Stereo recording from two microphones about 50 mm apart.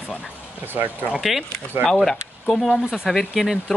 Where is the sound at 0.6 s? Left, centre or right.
Right.